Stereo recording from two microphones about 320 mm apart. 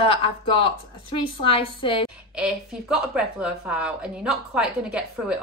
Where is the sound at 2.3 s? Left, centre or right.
Centre.